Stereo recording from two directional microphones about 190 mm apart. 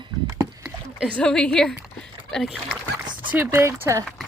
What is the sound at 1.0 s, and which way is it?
Speech, 5° left (ahead or behind).